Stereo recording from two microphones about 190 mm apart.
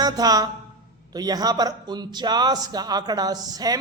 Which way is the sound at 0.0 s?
20° right (ahead or behind).